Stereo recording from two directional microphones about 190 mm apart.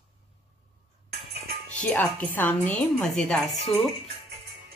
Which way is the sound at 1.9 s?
10° left (ahead or behind).